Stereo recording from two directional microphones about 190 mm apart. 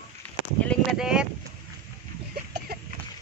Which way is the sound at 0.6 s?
Centre (ahead or behind).